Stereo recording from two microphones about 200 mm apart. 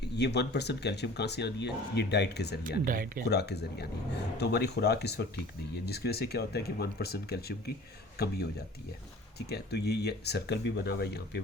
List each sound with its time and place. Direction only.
0.0 s speech: 55° left (ahead or behind)
2.8 s speech: 45° right (ahead or behind)
3.2 s speech: 55° left (ahead or behind)
9.5 s speech: 55° left (ahead or behind)